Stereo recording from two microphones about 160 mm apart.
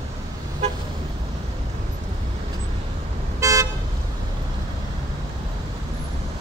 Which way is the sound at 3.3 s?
20° right (ahead or behind).